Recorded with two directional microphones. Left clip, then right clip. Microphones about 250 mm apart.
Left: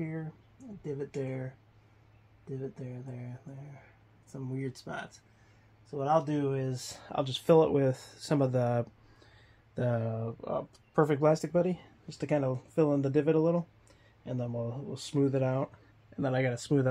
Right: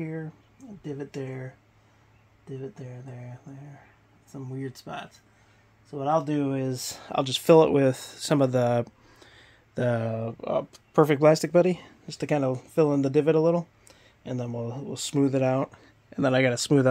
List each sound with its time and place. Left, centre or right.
0.8 s speech: right
4.7 s speech: centre
5.9 s speech: right